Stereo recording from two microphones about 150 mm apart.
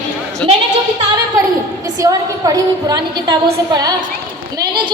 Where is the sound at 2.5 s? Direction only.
25° right (ahead or behind).